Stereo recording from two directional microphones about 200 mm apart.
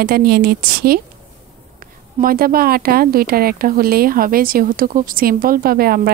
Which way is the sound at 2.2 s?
45° right (ahead or behind).